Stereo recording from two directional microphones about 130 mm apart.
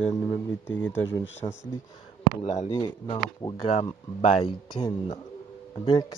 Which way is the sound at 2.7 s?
35° left (ahead or behind).